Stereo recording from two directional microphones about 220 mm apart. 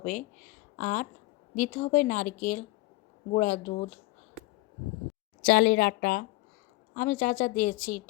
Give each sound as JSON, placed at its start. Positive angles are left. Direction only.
{"t": 0.0, "sound": "speech", "side_deg": 35}
{"t": 5.4, "sound": "speech", "side_deg": 45}